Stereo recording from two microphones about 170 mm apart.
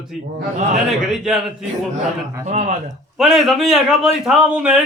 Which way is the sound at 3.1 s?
Centre (ahead or behind).